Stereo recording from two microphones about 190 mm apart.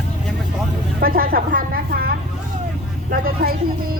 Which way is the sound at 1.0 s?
50° right (ahead or behind).